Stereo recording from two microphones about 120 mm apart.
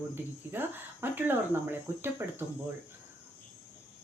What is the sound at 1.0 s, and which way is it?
Speech, 15° right (ahead or behind).